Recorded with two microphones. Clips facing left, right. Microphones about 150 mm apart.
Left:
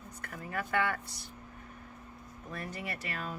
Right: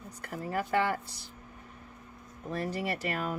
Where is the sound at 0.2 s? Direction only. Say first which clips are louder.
Right 5 dB; 35° right (ahead or behind).